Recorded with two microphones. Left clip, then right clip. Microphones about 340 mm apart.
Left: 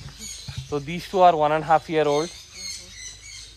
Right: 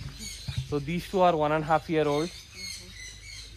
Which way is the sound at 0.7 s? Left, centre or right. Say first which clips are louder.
Left 3 dB; left.